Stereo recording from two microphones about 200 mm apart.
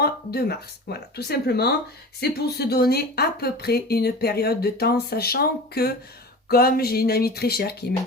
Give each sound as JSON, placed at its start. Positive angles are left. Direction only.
{"t": 0.0, "sound": "speech", "side_deg": 50}